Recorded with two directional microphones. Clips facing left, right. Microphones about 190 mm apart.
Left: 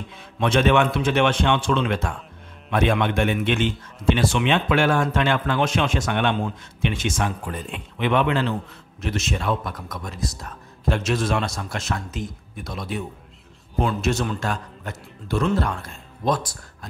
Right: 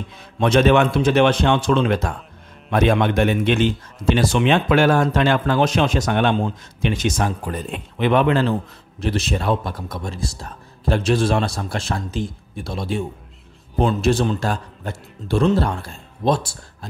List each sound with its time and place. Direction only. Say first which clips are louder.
0.4 s a man's voice: right 4 dB; 40° right (ahead or behind)